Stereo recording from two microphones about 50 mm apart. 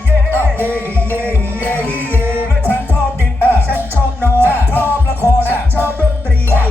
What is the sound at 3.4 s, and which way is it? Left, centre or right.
Music, left.